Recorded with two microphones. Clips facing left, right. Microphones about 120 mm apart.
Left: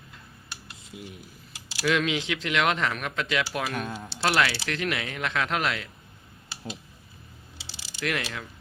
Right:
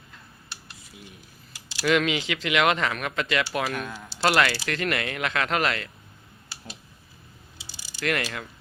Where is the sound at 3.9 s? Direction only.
25° left (ahead or behind).